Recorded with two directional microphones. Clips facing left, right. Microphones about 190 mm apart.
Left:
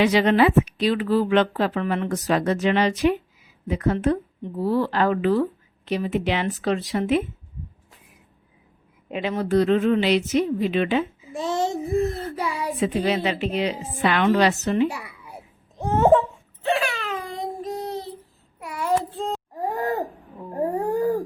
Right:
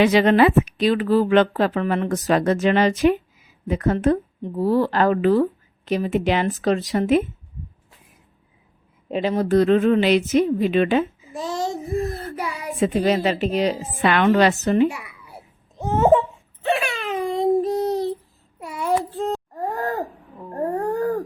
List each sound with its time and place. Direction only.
0.0 s a woman's voice: 50° right (ahead or behind)
9.0 s a woman's voice: 35° right (ahead or behind)
11.3 s child singing: 25° left (ahead or behind)
12.8 s a woman's voice: 45° right (ahead or behind)
14.0 s a woman's voice: 60° right (ahead or behind)
14.8 s a child's voice: 35° left (ahead or behind)
15.8 s babbling: centre (ahead or behind)
16.7 s a sound: 20° right (ahead or behind); by 17.9 s 35° right (ahead or behind)
18.6 s child singing: 25° right (ahead or behind)
19.1 s wail: 5° right (ahead or behind)
19.7 s wheeze: 20° left (ahead or behind)
20.5 s a sound: 10° left (ahead or behind)